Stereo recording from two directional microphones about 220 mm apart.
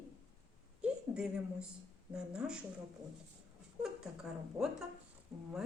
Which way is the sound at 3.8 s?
Centre (ahead or behind).